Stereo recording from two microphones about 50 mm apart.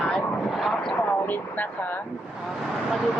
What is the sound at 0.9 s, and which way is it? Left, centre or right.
Speech, left.